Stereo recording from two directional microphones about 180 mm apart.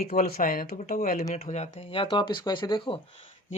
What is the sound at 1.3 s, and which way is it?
Speech, 40° left (ahead or behind).